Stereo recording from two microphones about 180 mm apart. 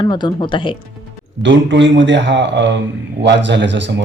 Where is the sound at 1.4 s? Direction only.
90° right.